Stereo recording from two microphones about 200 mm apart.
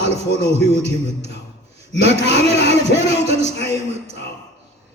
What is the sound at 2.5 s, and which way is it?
Music, 60° left (ahead or behind).